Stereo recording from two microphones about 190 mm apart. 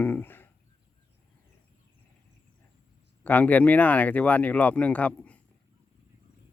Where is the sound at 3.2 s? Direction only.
10° left (ahead or behind).